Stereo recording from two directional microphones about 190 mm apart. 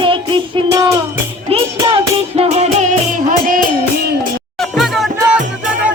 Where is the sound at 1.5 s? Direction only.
30° right (ahead or behind).